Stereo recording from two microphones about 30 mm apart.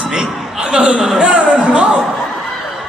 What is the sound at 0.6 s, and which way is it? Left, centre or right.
Chuckle, right.